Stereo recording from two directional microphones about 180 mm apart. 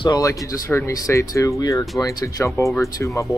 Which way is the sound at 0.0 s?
20° left (ahead or behind).